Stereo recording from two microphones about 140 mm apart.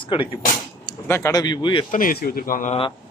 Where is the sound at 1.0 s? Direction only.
20° left (ahead or behind).